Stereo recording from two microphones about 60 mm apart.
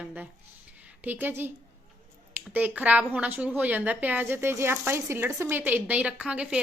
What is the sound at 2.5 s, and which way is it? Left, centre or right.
A woman's voice, right.